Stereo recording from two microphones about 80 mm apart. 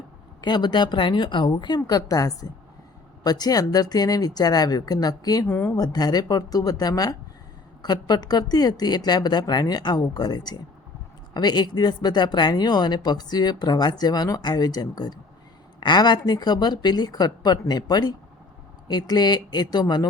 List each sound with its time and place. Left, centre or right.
0.4 s a woman's voice: left
5.5 s speech: left
5.7 s speech: left